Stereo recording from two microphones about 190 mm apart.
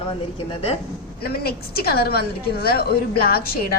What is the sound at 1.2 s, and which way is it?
A woman's voice, 55° left (ahead or behind).